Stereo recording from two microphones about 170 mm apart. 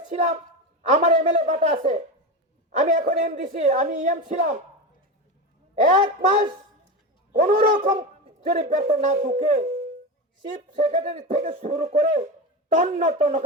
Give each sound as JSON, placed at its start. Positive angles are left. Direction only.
{"t": 0.1, "sound": "a woman's voice", "side_deg": -40}
{"t": 5.8, "sound": "speech", "side_deg": -40}
{"t": 7.3, "sound": "speech", "side_deg": -55}